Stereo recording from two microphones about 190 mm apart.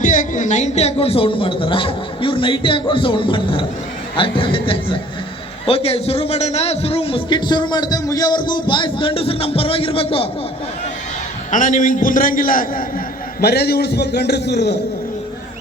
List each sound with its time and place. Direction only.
0.0 s a man's voice: 45° left (ahead or behind)
11.5 s a man's voice: 45° left (ahead or behind); by 14.8 s 60° left (ahead or behind)